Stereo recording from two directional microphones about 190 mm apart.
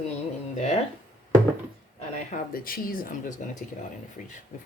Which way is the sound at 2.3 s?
50° left (ahead or behind).